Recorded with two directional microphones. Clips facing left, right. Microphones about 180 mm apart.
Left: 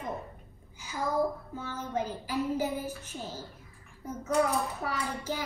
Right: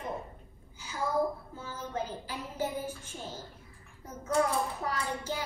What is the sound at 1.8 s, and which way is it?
A child's voice, 10° left (ahead or behind).